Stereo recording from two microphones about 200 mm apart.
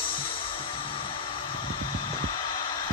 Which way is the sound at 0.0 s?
25° left (ahead or behind).